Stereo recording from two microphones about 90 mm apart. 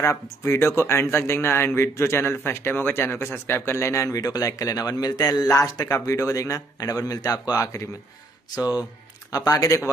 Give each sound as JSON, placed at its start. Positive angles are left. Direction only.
{"t": 0.0, "sound": "speech", "side_deg": 30}